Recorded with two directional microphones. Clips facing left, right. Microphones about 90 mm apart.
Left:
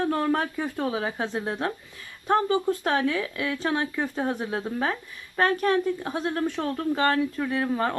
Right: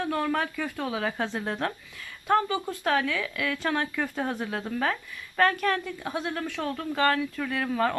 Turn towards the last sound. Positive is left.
turn(degrees=25)  # may be behind; listen again after turning